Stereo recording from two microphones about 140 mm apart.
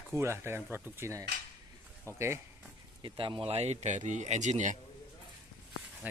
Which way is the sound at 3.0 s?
35° right (ahead or behind).